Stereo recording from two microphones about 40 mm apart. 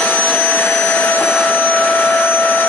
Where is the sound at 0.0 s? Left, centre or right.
Left.